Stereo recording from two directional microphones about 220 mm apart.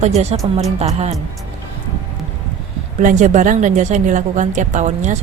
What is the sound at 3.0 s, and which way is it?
A woman's voice, 35° right (ahead or behind).